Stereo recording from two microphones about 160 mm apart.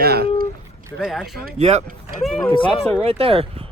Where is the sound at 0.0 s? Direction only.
80° right.